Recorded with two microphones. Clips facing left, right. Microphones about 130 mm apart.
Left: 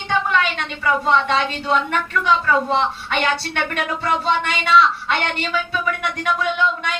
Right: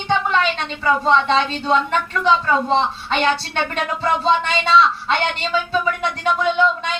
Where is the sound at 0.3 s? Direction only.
30° right (ahead or behind).